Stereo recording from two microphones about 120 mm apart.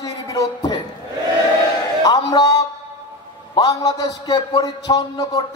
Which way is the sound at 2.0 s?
30° left (ahead or behind).